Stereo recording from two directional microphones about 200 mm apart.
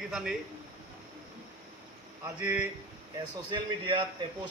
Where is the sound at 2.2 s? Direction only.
15° right (ahead or behind).